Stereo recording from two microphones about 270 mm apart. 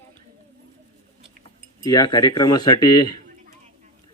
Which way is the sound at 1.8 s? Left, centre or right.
Centre.